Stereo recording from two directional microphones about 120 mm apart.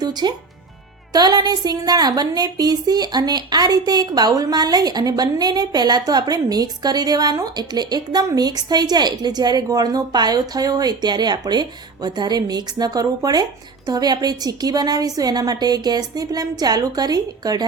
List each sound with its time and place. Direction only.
0.0 s a woman's voice: 35° right (ahead or behind)